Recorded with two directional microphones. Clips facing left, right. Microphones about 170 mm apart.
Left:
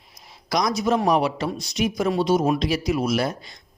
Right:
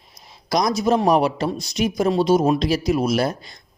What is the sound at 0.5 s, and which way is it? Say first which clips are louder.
Speech: right 3 dB; 30° right (ahead or behind).